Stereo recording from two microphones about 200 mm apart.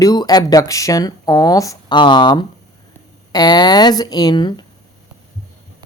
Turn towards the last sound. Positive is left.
turn(degrees=20)  # may be behind; listen again after turning